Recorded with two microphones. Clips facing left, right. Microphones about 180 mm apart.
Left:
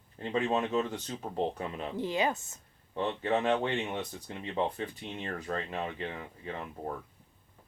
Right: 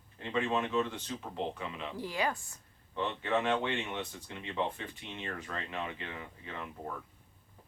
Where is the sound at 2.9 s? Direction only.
40° left (ahead or behind).